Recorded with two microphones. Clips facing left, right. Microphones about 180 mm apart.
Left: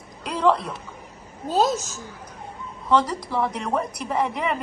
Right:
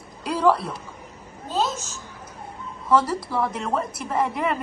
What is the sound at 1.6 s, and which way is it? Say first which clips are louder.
Speech: left 4 dB; 40° left (ahead or behind).